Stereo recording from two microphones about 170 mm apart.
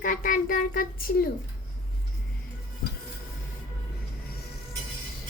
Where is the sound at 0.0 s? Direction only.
55° left (ahead or behind).